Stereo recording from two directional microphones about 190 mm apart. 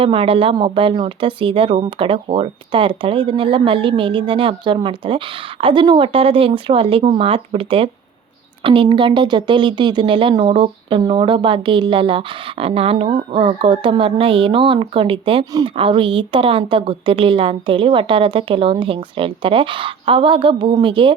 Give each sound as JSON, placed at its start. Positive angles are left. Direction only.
{"t": 0.0, "sound": "speech", "side_deg": -30}